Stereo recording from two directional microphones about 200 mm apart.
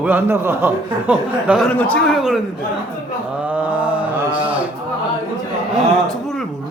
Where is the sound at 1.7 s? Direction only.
5° left (ahead or behind).